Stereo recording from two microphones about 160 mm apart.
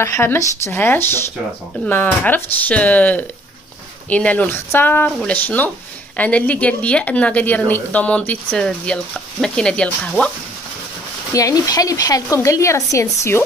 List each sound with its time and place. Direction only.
0.0 s a woman's voice: 15° left (ahead or behind)
11.3 s speech: 20° left (ahead or behind)